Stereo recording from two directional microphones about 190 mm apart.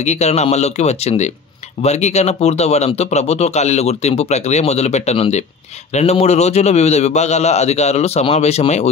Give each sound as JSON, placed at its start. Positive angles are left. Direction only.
{"t": 0.0, "sound": "speech", "side_deg": 35}